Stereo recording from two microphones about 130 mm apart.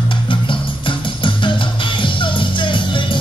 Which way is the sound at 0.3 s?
40° left (ahead or behind).